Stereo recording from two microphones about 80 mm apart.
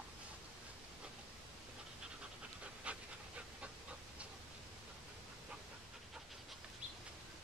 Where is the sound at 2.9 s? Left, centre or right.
Centre.